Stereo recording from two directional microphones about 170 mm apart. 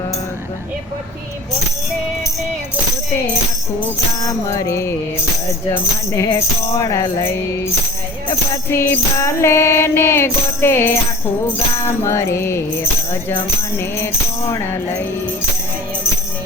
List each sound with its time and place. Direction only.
4.2 s music: 20° left (ahead or behind)
6.2 s speech: 25° left (ahead or behind)
8.7 s music: 15° left (ahead or behind)